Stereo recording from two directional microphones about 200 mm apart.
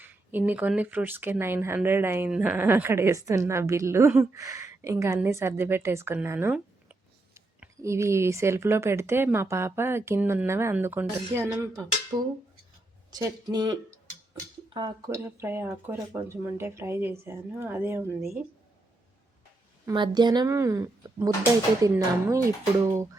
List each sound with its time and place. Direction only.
0.0 s speech: 10° right (ahead or behind)
19.8 s speech: 20° right (ahead or behind)